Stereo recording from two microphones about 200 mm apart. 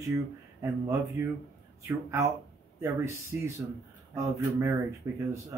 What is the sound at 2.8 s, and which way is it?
Speech, 15° right (ahead or behind).